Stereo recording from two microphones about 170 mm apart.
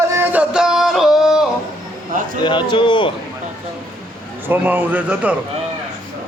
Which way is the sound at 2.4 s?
25° left (ahead or behind).